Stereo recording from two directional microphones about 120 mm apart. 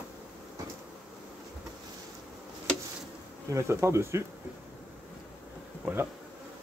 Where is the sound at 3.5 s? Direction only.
20° right (ahead or behind).